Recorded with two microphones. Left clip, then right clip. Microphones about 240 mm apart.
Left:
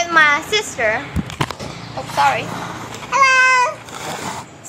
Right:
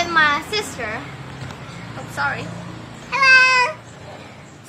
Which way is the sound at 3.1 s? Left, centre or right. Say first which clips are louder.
Even; centre.